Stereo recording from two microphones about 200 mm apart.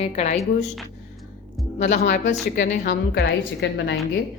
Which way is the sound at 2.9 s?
60° left (ahead or behind).